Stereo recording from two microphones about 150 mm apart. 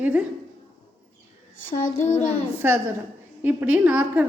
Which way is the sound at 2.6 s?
15° right (ahead or behind).